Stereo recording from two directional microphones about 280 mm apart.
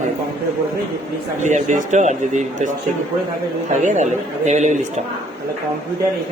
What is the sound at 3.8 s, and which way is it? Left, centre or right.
A man's voice, right.